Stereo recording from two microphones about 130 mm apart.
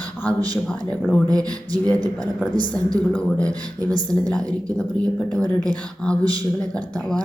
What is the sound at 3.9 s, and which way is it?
Speech, 30° right (ahead or behind).